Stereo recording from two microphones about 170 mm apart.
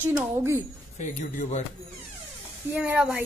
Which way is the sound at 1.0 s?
45° left (ahead or behind).